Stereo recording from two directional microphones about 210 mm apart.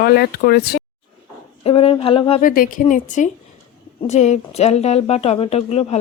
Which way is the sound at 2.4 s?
40° left (ahead or behind).